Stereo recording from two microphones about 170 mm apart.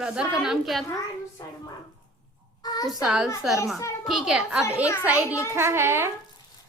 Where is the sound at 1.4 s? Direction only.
20° left (ahead or behind).